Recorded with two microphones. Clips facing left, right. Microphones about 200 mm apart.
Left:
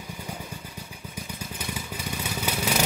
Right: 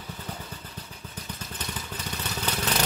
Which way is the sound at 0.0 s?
10° left (ahead or behind).